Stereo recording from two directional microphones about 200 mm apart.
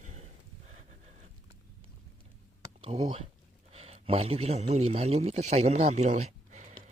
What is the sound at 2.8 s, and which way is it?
Speech, 30° right (ahead or behind).